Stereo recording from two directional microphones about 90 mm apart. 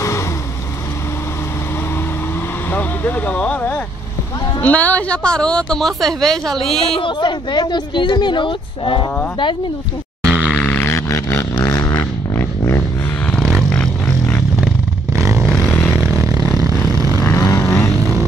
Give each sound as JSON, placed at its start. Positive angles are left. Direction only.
{"t": 2.7, "sound": "vehicle", "side_deg": 20}
{"t": 4.6, "sound": "speech", "side_deg": 15}
{"t": 7.0, "sound": "speech", "side_deg": 65}
{"t": 10.2, "sound": "grunt", "side_deg": -15}
{"t": 10.6, "sound": "a sound", "side_deg": 20}
{"t": 13.6, "sound": "a sound", "side_deg": 10}
{"t": 15.1, "sound": "vehicle", "side_deg": -35}
{"t": 15.7, "sound": "vehicle", "side_deg": 25}
{"t": 16.2, "sound": "vehicle", "side_deg": -40}
{"t": 17.2, "sound": "vehicle", "side_deg": 40}
{"t": 17.9, "sound": "vehicle", "side_deg": -40}